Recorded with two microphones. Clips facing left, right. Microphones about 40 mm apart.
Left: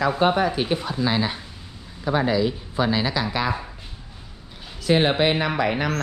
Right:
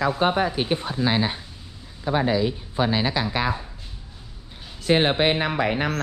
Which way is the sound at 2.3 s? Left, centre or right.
Centre.